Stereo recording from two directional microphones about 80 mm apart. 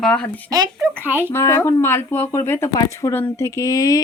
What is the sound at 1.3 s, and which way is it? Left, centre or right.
Speech, left.